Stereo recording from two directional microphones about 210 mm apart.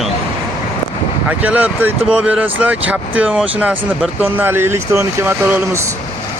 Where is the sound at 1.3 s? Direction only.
5° right (ahead or behind).